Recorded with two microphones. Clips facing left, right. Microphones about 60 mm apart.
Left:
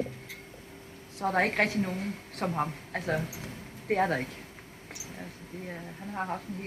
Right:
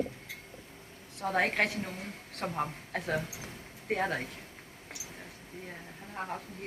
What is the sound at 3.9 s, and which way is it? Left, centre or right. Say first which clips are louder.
Speech: left 4 dB; left.